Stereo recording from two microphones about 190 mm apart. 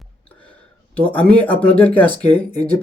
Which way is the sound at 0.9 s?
5° left (ahead or behind).